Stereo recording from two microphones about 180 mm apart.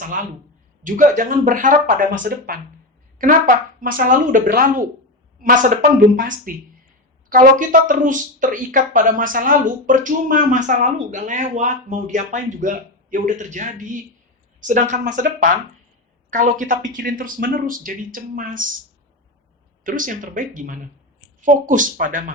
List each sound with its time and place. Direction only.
0.2 s speech: 50° right (ahead or behind)
19.8 s speech: 45° right (ahead or behind)